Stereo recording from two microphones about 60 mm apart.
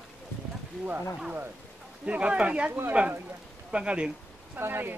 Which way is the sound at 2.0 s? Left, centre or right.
Right.